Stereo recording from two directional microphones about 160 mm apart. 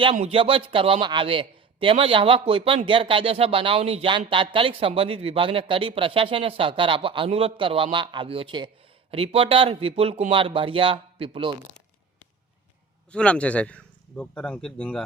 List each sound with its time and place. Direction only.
0.2 s a man's voice: 35° right (ahead or behind)
13.1 s a man's voice: 5° left (ahead or behind)